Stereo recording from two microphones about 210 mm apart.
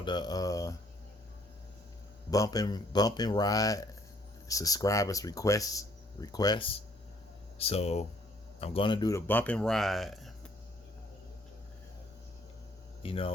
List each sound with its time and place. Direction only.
0.0 s speech: 20° left (ahead or behind)
2.3 s speech: 15° left (ahead or behind); by 10.3 s centre (ahead or behind)
13.0 s speech: 25° left (ahead or behind)